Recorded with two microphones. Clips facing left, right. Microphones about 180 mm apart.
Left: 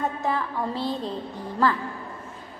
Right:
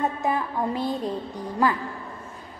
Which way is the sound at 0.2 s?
15° right (ahead or behind).